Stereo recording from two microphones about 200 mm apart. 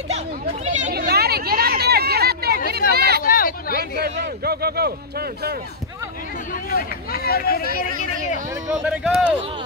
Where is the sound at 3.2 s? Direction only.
45° left (ahead or behind).